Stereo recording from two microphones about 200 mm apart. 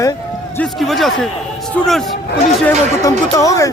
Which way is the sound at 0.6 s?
Centre (ahead or behind).